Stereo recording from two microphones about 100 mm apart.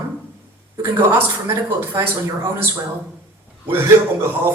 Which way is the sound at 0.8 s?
25° right (ahead or behind).